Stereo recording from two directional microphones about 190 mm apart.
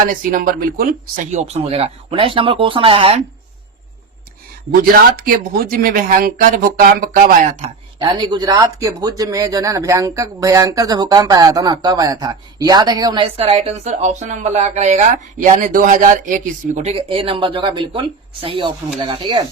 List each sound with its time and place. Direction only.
0.0 s speech: 45° right (ahead or behind)
4.7 s speech: 50° right (ahead or behind)
7.9 s a man's voice: 25° right (ahead or behind)